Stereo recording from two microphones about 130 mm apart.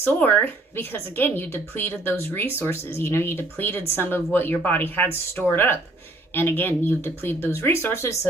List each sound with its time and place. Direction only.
0.0 s a woman's voice: 15° left (ahead or behind)